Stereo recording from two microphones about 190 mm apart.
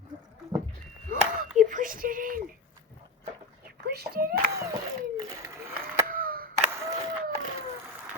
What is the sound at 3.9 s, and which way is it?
Speech, 55° right (ahead or behind).